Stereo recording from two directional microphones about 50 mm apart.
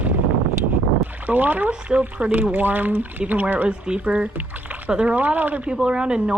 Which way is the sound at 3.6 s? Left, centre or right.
Right.